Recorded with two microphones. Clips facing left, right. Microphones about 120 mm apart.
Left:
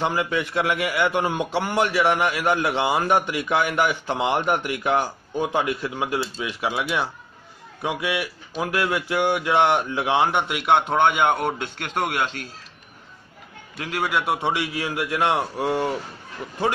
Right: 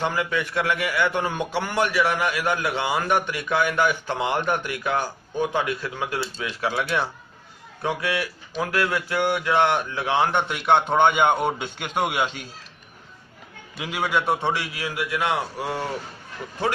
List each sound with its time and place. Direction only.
0.0 s a man's voice: 20° left (ahead or behind); by 12.4 s 5° right (ahead or behind)
13.7 s a man's voice: centre (ahead or behind)
14.5 s a man's voice: 25° left (ahead or behind)